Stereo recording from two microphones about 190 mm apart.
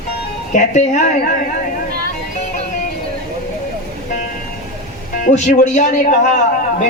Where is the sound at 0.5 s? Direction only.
40° left (ahead or behind).